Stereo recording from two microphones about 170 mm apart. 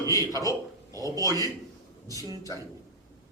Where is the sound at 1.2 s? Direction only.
20° right (ahead or behind).